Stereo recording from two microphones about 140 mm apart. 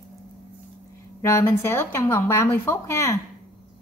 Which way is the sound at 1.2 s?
20° left (ahead or behind).